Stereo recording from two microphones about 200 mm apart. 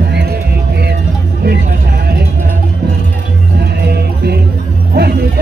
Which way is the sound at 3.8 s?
55° right (ahead or behind).